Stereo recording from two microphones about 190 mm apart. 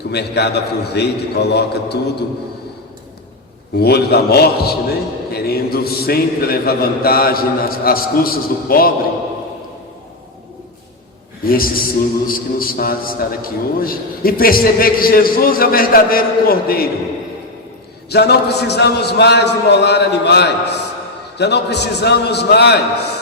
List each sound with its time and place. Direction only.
0.1 s a man's voice: 60° left (ahead or behind)
3.8 s a man's voice: 55° left (ahead or behind)
11.4 s a man's voice: 50° left (ahead or behind)
18.1 s a man's voice: 60° left (ahead or behind)